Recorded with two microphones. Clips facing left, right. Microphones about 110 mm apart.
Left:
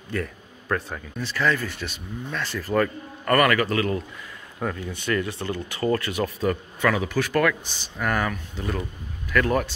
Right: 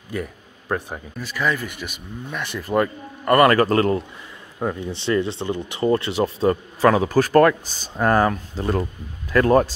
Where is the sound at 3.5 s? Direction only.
40° right (ahead or behind).